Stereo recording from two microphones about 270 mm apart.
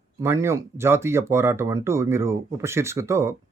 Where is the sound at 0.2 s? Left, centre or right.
Centre.